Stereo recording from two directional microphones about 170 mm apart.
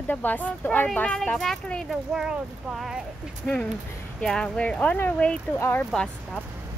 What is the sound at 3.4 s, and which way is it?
Speech, 5° left (ahead or behind).